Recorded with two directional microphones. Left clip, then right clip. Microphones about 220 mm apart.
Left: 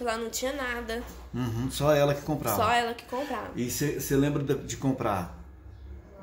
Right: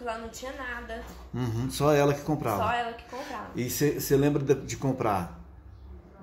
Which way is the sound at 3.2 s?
10° right (ahead or behind).